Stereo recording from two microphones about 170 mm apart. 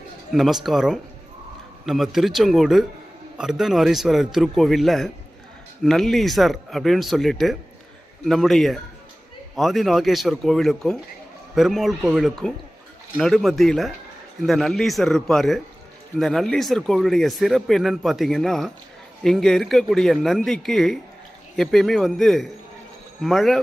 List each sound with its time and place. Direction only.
0.3 s speech: centre (ahead or behind)